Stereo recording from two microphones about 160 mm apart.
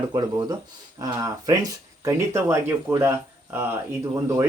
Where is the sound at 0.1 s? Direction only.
25° right (ahead or behind).